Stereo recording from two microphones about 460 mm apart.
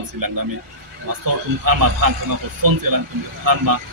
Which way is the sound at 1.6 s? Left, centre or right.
Right.